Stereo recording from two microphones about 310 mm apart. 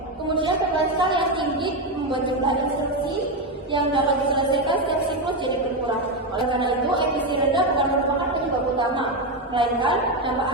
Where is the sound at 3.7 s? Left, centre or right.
Centre.